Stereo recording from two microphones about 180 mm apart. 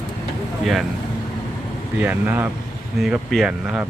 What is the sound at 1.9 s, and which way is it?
Speech, 10° right (ahead or behind).